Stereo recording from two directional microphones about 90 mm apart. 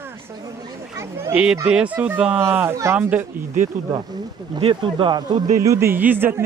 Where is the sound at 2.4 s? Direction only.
25° right (ahead or behind).